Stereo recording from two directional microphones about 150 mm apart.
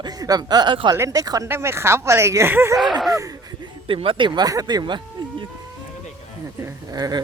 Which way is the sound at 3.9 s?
35° right (ahead or behind).